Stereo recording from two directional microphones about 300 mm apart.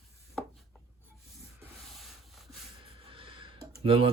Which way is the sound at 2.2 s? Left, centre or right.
Centre.